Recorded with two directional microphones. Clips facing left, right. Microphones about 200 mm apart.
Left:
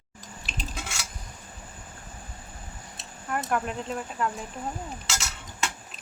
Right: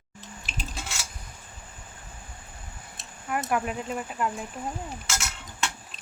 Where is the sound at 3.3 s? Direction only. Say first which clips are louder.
Right 1 dB; 5° right (ahead or behind).